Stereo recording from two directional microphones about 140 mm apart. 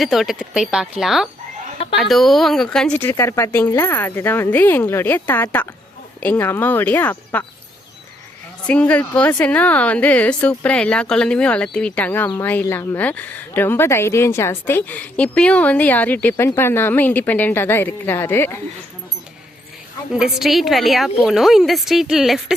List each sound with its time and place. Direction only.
0.0 s a woman's voice: centre (ahead or behind); by 7.4 s 15° left (ahead or behind)
8.6 s speech: 10° left (ahead or behind)
20.1 s a woman's voice: 5° right (ahead or behind)